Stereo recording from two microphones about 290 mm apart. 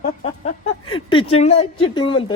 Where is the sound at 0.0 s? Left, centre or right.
Left.